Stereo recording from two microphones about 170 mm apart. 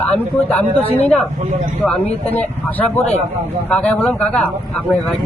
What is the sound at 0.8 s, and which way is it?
Speech, 35° left (ahead or behind).